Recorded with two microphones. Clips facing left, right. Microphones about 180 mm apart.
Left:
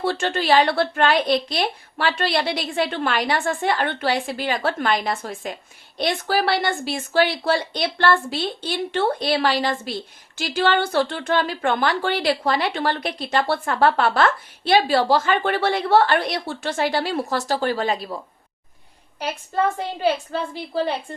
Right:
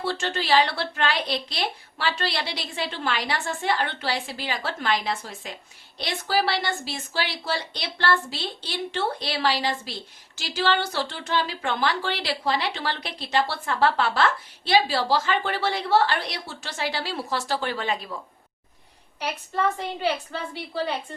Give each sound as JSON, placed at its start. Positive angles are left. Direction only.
{"t": 0.0, "sound": "a woman's voice", "side_deg": 55}
{"t": 20.0, "sound": "a woman's voice", "side_deg": 45}